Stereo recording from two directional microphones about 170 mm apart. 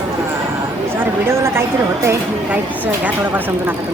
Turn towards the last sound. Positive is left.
turn(degrees=-10)  # may be behind; listen again after turning